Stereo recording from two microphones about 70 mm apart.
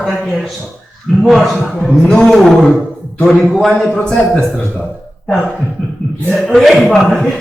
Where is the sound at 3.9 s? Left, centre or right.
Centre.